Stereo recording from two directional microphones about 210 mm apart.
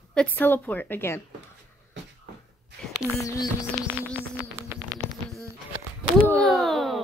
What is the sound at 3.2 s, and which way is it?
Speech, 15° left (ahead or behind).